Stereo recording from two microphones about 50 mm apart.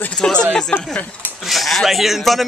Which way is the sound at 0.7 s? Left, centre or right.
Left.